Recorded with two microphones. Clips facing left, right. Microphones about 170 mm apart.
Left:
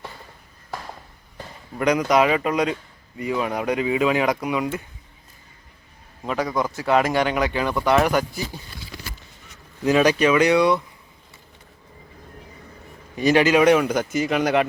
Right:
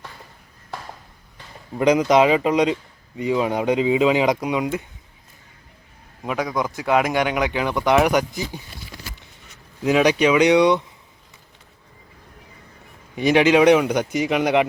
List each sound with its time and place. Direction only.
1.7 s speech: 20° right (ahead or behind)
6.2 s speech: 5° right (ahead or behind)
9.8 s speech: 10° right (ahead or behind)
13.2 s speech: 15° right (ahead or behind)